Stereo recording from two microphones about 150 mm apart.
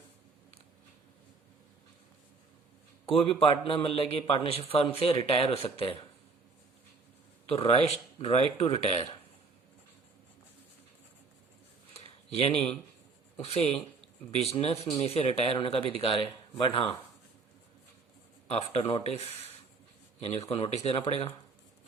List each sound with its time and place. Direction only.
3.1 s a man's voice: 35° left (ahead or behind)
7.4 s a man's voice: 40° left (ahead or behind)
11.9 s a sound: 40° left (ahead or behind)
13.3 s a man's voice: 45° left (ahead or behind)
18.4 s a man's voice: 40° left (ahead or behind)